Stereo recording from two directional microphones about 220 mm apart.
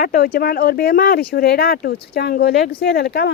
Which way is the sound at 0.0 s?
40° left (ahead or behind).